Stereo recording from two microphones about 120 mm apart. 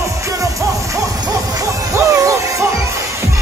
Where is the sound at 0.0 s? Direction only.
25° right (ahead or behind).